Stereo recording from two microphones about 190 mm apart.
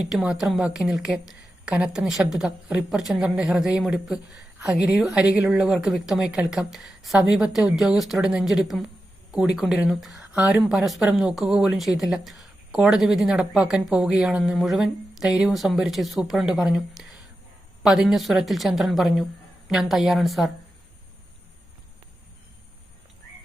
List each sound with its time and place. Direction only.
0.1 s a woman's voice: 5° right (ahead or behind)